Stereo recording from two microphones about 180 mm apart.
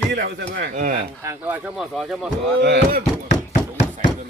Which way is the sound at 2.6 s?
70° right (ahead or behind).